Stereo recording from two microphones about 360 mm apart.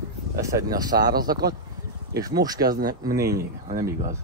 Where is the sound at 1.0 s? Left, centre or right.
Right.